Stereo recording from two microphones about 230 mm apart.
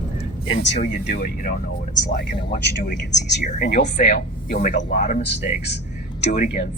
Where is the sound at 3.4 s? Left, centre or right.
Left.